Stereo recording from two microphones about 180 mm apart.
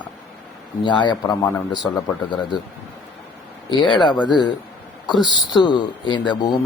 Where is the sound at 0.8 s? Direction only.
25° left (ahead or behind).